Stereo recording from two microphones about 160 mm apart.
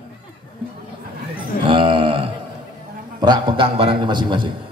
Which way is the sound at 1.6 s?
35° right (ahead or behind).